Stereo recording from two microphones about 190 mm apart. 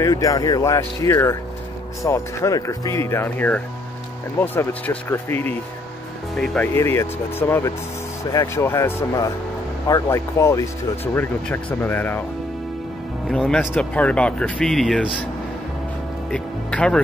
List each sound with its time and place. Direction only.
0.0 s speech: 20° left (ahead or behind)
13.3 s speech: 5° left (ahead or behind)
16.3 s speech: 5° left (ahead or behind)